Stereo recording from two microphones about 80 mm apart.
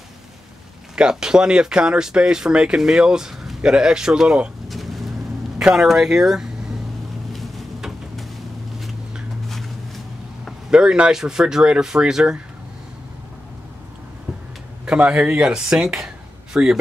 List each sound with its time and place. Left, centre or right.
0.9 s speech: centre
7.3 s a sound: centre
10.7 s speech: centre
14.9 s speech: centre